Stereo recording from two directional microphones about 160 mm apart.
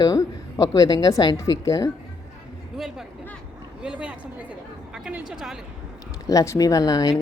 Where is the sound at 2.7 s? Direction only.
Centre (ahead or behind).